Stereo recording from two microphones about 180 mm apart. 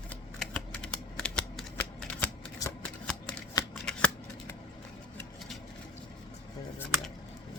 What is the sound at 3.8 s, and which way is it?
Shuffling cards, 5° left (ahead or behind).